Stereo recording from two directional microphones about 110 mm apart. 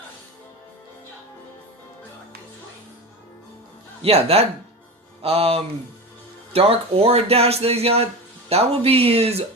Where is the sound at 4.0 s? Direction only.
65° right (ahead or behind).